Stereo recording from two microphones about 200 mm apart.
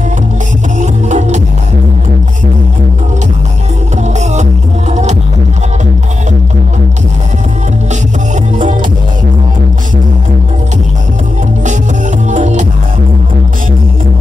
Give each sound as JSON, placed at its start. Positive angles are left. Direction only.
{"t": 0.7, "sound": "music", "side_deg": -35}
{"t": 4.2, "sound": "music", "side_deg": -35}
{"t": 12.3, "sound": "music", "side_deg": -35}